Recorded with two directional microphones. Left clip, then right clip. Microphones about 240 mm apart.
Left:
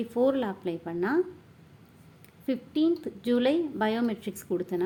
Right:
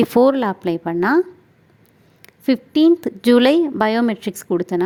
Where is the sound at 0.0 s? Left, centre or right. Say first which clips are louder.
Right 12 dB; right.